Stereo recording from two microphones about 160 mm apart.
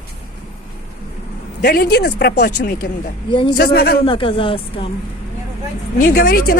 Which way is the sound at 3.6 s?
75° left (ahead or behind).